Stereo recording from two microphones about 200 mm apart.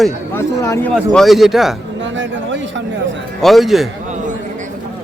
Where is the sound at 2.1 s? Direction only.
65° right (ahead or behind).